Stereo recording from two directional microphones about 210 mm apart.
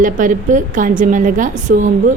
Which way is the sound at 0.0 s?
40° right (ahead or behind).